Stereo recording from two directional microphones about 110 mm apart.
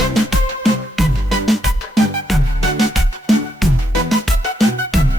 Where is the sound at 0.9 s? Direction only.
Centre (ahead or behind).